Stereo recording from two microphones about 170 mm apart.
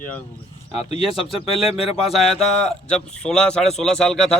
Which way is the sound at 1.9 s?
Centre (ahead or behind).